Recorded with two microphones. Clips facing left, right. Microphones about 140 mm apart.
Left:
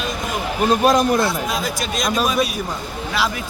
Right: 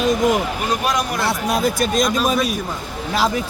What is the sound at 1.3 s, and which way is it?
Speech, 60° right (ahead or behind).